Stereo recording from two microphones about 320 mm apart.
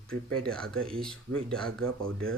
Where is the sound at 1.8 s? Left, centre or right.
Right.